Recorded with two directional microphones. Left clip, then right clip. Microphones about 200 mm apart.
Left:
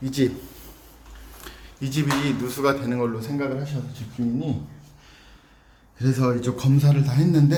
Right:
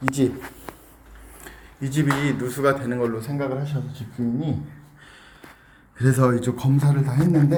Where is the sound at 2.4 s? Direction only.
Centre (ahead or behind).